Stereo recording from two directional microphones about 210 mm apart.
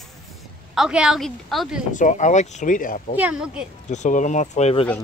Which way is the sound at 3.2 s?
5° right (ahead or behind).